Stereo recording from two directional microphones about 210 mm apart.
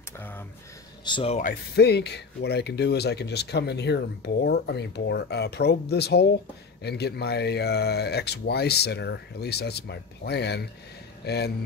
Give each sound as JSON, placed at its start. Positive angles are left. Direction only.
{"t": 0.2, "sound": "a sound", "side_deg": 10}
{"t": 1.0, "sound": "speech", "side_deg": 25}
{"t": 1.8, "sound": "speech", "side_deg": 50}